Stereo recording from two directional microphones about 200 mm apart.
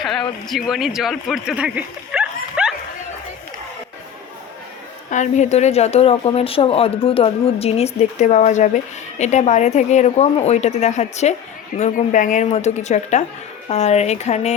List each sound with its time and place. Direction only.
0.0 s speech: centre (ahead or behind)
5.1 s speech: 35° left (ahead or behind)